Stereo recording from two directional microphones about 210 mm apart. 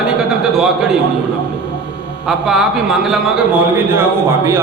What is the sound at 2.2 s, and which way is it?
Speech, centre (ahead or behind).